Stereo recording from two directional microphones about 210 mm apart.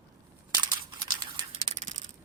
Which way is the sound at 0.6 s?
20° right (ahead or behind).